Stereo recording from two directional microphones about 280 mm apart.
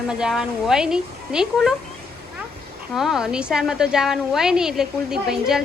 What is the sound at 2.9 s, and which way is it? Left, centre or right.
A woman's voice, centre.